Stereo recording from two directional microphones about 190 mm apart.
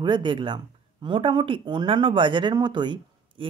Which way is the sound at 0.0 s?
25° right (ahead or behind).